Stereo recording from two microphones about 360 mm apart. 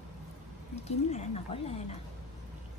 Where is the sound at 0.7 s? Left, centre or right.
Centre.